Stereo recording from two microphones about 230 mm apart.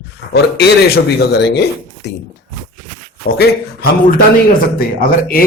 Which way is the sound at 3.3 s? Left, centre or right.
Left.